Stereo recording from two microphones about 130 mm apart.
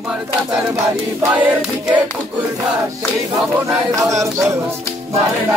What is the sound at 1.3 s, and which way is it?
Choir, 10° right (ahead or behind).